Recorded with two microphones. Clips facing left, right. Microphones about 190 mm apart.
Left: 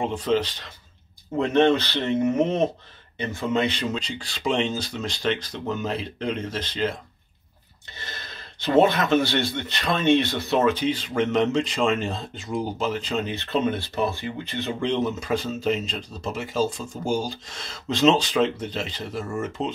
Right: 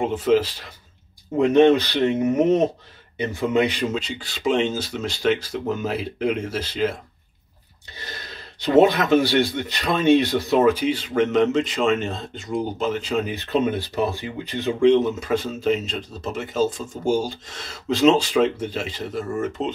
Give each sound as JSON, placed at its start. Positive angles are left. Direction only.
{"t": 0.0, "sound": "speech", "side_deg": -5}
{"t": 8.8, "sound": "speech", "side_deg": -10}
{"t": 16.9, "sound": "speech", "side_deg": -25}
{"t": 17.5, "sound": "speech", "side_deg": -5}